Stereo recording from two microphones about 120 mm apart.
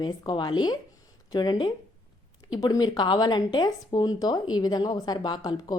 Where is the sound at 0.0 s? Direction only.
35° left (ahead or behind).